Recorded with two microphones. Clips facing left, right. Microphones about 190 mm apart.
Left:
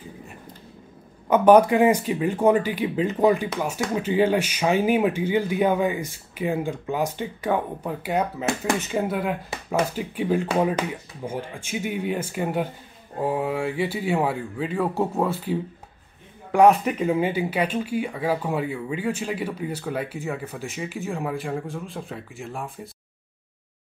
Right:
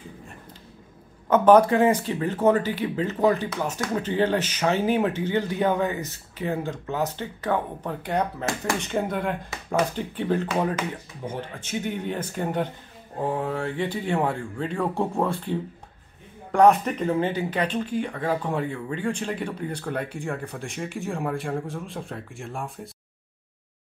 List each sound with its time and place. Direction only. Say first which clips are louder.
1.3 s speech: left 1 dB; 15° left (ahead or behind)